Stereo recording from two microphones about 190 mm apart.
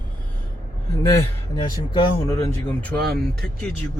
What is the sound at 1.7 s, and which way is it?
Speech, 20° left (ahead or behind).